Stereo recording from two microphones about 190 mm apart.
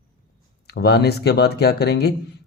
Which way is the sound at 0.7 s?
60° left (ahead or behind).